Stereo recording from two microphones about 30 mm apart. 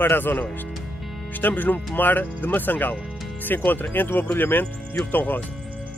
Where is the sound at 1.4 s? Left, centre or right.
Left.